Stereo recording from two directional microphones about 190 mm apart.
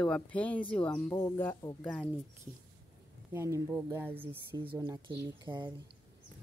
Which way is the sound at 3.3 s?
15° right (ahead or behind).